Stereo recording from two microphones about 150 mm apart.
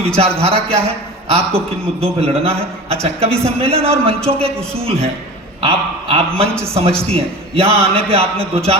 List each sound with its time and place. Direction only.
0.2 s a man's voice: 40° right (ahead or behind)